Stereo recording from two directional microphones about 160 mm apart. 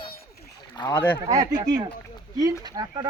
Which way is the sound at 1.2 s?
45° right (ahead or behind).